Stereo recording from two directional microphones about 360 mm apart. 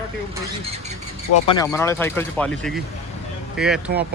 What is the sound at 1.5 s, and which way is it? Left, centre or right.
A man's voice, centre.